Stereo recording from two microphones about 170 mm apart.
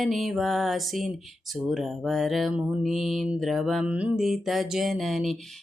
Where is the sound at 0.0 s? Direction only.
Centre (ahead or behind).